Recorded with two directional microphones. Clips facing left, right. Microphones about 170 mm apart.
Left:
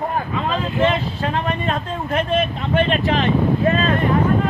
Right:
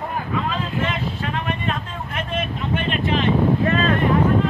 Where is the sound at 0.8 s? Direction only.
35° left (ahead or behind).